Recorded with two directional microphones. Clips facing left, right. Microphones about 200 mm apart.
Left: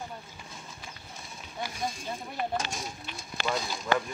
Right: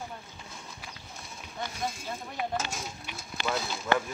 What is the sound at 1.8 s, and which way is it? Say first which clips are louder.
Speech: even; centre (ahead or behind).